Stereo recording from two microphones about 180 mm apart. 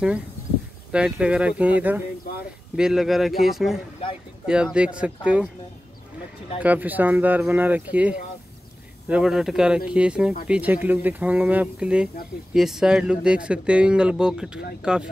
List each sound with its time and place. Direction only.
0.9 s speech: 5° right (ahead or behind)
2.3 s a sound: 60° left (ahead or behind)
2.7 s speech: 5° right (ahead or behind)
6.6 s speech: 10° right (ahead or behind)